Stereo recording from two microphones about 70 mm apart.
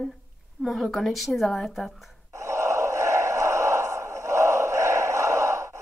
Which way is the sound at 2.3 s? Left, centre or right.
Right.